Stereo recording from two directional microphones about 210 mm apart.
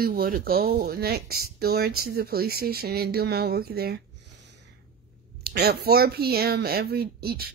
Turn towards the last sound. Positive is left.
turn(degrees=-45)  # may be behind; listen again after turning